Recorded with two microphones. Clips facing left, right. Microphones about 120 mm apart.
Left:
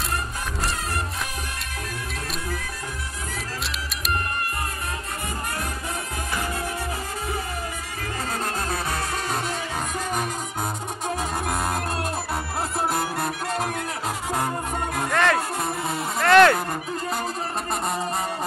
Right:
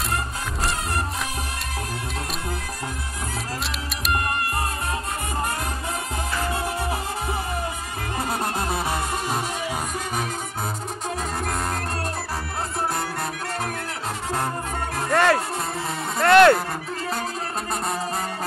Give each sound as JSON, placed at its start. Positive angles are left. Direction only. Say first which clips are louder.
{"t": 6.5, "sound": "music", "louder": "right 3 dB", "side_deg": -25}
{"t": 8.3, "sound": "music", "louder": "right 2 dB", "side_deg": -15}
{"t": 11.4, "sound": "music", "louder": "left 1 dB", "side_deg": 10}
{"t": 15.0, "sound": "music", "louder": "right 3 dB", "side_deg": -5}